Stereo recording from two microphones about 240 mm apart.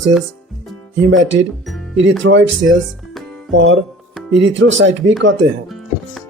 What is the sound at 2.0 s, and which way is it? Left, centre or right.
Speech, right.